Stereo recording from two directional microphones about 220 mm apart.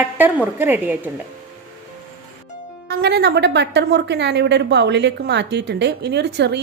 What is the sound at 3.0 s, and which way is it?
A woman's voice, 50° right (ahead or behind).